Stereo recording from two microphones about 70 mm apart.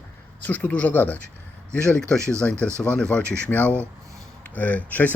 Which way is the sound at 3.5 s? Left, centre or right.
Left.